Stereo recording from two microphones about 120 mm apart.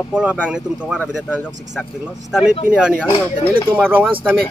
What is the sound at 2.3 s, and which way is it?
Speech, 5° right (ahead or behind).